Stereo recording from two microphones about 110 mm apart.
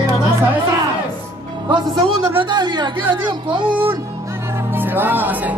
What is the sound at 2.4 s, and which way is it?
Speech, 40° right (ahead or behind).